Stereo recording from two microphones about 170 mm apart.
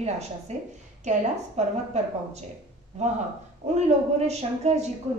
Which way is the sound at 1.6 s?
40° right (ahead or behind).